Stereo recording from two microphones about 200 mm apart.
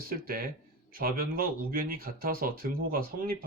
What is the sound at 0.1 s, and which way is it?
Speech, 45° right (ahead or behind).